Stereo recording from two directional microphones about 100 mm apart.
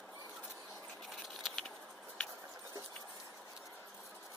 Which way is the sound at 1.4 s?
5° left (ahead or behind).